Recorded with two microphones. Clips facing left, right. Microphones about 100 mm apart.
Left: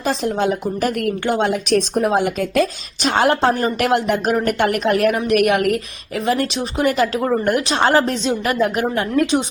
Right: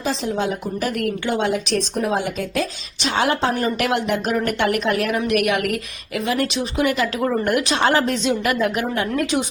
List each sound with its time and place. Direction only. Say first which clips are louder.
0.0 s a woman's voice: left 3 dB; 55° left (ahead or behind); by 9.0 s 40° left (ahead or behind)